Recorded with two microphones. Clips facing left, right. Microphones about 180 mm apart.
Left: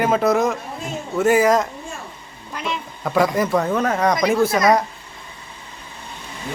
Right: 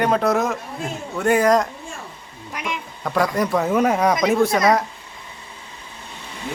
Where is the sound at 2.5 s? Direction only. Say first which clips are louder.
Left 2 dB; 15° right (ahead or behind).